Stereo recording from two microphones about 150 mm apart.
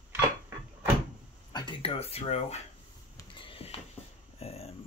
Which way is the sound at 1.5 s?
30° left (ahead or behind).